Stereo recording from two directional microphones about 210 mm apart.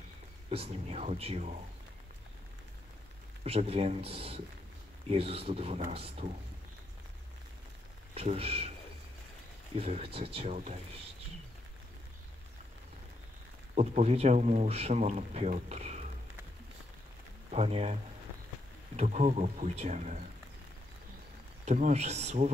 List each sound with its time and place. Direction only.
0.5 s speech: 30° right (ahead or behind)
3.4 s speech: 30° right (ahead or behind)
8.1 s speech: 30° right (ahead or behind)
9.8 s speech: 30° right (ahead or behind)
13.7 s speech: 30° right (ahead or behind)
17.5 s speech: 30° right (ahead or behind)
18.9 s speech: 30° right (ahead or behind)
21.6 s speech: 35° right (ahead or behind)